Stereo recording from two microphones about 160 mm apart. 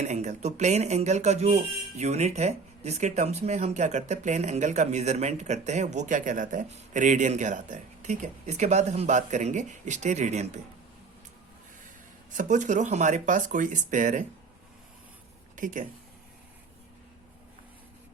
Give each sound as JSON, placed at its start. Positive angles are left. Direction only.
{"t": 0.0, "sound": "speech", "side_deg": -45}
{"t": 12.3, "sound": "speech", "side_deg": -50}
{"t": 15.5, "sound": "speech", "side_deg": -55}